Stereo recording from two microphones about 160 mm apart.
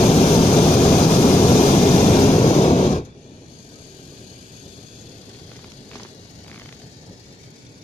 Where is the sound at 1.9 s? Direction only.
45° left (ahead or behind).